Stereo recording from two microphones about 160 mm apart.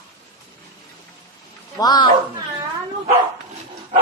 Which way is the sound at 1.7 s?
25° left (ahead or behind).